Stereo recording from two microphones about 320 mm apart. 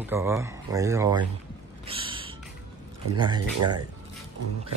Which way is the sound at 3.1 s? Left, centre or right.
Centre.